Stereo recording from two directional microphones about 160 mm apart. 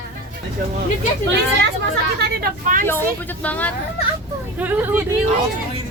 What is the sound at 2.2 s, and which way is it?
Speech, 75° right (ahead or behind).